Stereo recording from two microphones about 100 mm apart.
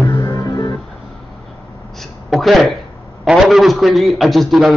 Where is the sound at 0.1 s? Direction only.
40° left (ahead or behind).